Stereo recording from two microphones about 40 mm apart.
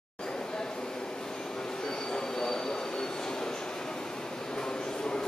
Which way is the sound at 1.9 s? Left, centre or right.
Centre.